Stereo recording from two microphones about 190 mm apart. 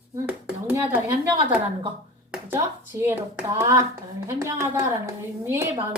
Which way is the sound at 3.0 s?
10° right (ahead or behind).